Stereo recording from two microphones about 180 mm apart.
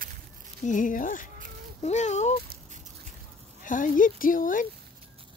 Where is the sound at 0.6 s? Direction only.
45° left (ahead or behind).